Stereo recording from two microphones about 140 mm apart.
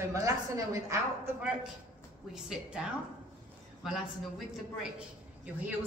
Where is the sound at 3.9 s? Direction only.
Centre (ahead or behind).